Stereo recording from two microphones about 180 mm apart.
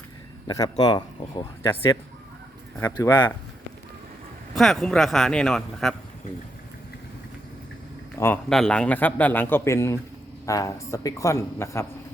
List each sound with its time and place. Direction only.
0.4 s speech: 20° left (ahead or behind)
2.7 s a man's voice: 10° left (ahead or behind)
3.1 s speech: 25° left (ahead or behind)
4.5 s speech: centre (ahead or behind)
8.1 s a man's voice: 10° left (ahead or behind)